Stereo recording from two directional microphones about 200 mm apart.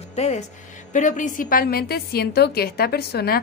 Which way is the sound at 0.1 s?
35° left (ahead or behind).